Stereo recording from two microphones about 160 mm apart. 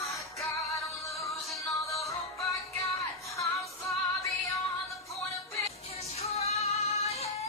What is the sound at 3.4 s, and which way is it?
Music, centre (ahead or behind).